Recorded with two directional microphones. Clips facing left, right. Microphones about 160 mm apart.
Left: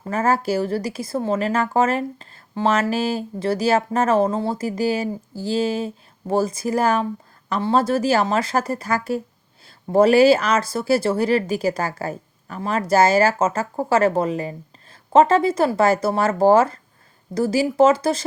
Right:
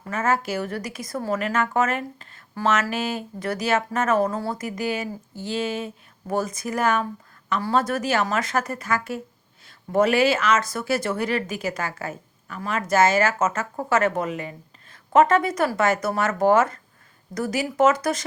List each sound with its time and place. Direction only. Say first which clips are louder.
0.0 s speech: left 4 dB; 35° left (ahead or behind)